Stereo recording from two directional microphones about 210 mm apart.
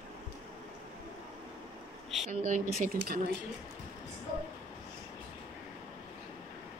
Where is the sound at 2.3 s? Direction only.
40° right (ahead or behind).